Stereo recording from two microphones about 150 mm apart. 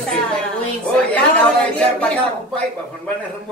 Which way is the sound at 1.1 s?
10° left (ahead or behind).